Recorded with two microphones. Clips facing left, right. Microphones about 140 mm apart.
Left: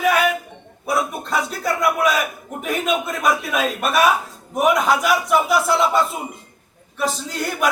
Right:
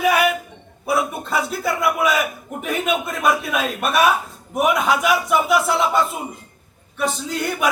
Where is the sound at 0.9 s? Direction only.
5° right (ahead or behind).